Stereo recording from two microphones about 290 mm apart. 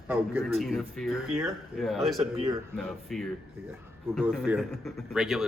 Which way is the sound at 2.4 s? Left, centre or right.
Centre.